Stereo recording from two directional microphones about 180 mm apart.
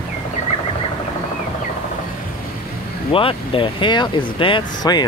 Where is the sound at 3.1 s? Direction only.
30° left (ahead or behind).